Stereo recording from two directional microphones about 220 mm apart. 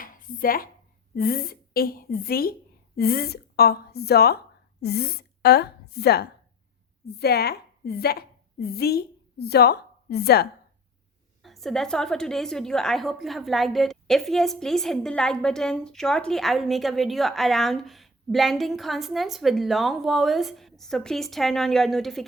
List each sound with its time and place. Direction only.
0.0 s dishes: 40° left (ahead or behind)
1.1 s a woman's voice: 45° left (ahead or behind)
11.4 s a woman's voice: centre (ahead or behind)